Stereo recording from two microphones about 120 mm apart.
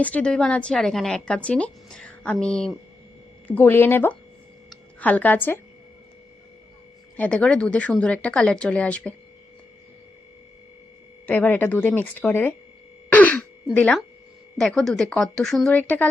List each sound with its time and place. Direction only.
0.0 s speech: 10° left (ahead or behind)
3.4 s speech: 15° left (ahead or behind)
7.2 s speech: 10° left (ahead or behind)
11.3 s speech: 15° left (ahead or behind)
13.1 s throat clearing: 15° left (ahead or behind)
13.7 s a woman's voice: 10° left (ahead or behind)